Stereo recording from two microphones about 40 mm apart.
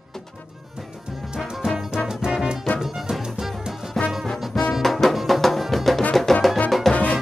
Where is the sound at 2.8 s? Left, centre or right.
Centre.